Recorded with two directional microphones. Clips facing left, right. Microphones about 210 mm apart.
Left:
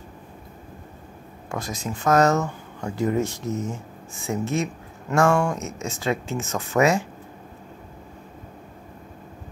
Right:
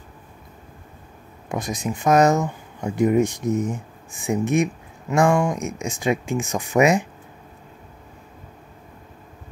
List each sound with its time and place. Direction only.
1.5 s speech: 15° right (ahead or behind)